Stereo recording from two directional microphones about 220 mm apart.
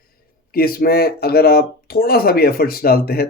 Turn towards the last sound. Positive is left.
turn(degrees=45)  # may be behind; listen again after turning